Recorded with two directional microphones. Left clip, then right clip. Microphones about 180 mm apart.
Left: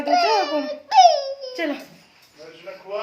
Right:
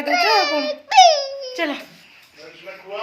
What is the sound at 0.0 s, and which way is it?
Babbling, 35° left (ahead or behind).